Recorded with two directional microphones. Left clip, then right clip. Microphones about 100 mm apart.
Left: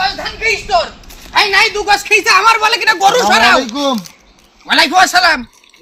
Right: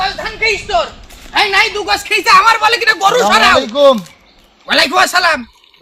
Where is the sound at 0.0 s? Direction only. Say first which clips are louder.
Even; 10° right (ahead or behind).